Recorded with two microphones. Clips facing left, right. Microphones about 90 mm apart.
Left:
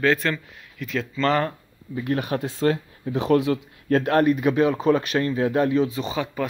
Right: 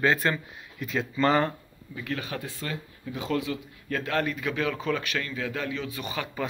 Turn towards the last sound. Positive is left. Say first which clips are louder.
# left 7 dB
turn(degrees=20)  # may be behind; listen again after turning